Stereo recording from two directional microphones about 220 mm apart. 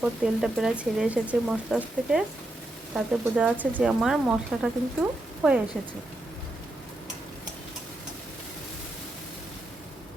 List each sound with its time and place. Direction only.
0.0 s speech: 5° right (ahead or behind)